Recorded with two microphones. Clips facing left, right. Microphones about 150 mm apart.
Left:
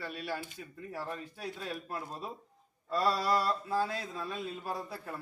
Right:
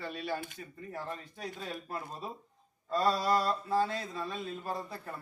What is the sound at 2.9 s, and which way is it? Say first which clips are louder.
Speech: right 1 dB; 5° left (ahead or behind).